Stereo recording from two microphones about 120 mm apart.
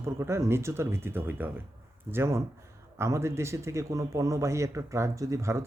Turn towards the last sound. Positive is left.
turn(degrees=-25)  # may be behind; listen again after turning